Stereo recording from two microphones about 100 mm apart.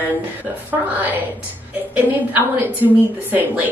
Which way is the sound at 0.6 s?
20° right (ahead or behind).